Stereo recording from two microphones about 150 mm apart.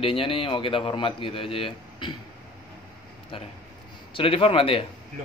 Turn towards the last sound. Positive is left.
turn(degrees=40)  # may be behind; listen again after turning